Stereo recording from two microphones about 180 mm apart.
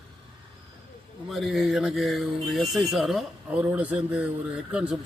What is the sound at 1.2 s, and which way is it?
Speech, centre (ahead or behind).